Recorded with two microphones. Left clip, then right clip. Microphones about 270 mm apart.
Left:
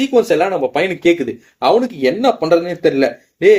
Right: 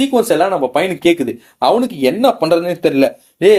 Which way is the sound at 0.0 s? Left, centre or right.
Centre.